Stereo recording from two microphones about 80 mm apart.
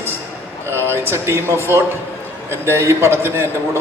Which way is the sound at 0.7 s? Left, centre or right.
Right.